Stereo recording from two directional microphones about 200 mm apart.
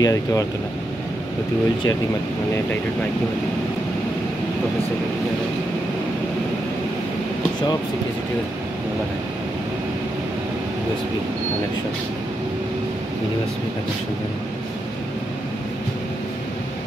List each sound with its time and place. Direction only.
0.0 s speech: 15° left (ahead or behind)